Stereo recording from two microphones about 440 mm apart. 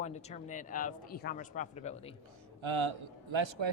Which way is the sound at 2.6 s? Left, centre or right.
Right.